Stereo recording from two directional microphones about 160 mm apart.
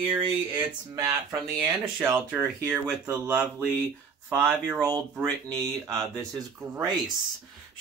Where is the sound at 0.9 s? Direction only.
20° right (ahead or behind).